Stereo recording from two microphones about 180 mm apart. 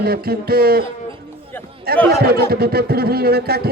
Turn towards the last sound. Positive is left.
turn(degrees=-60)  # may be behind; listen again after turning